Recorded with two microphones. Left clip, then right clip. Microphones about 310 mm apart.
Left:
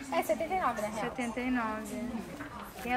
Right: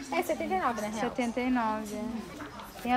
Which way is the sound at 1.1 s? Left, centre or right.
Centre.